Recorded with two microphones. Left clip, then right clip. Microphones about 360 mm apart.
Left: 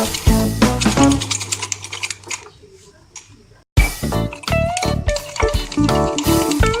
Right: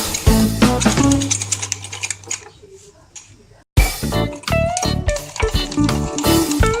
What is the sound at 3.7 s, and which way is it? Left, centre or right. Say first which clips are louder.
Music: right 1 dB; centre.